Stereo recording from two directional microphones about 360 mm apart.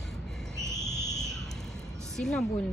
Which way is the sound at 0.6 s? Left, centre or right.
Centre.